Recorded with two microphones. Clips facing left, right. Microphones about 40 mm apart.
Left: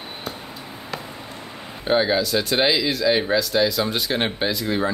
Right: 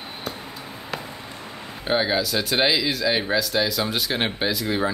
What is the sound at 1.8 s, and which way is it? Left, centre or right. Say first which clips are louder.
Speech: left 3 dB; centre.